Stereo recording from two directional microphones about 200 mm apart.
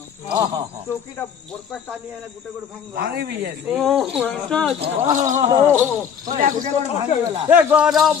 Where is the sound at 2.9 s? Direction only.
50° right (ahead or behind).